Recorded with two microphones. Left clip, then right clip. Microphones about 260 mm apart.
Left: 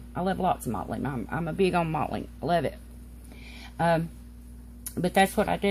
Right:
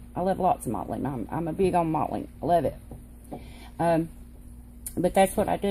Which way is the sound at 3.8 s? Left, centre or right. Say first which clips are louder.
Right 1 dB; centre.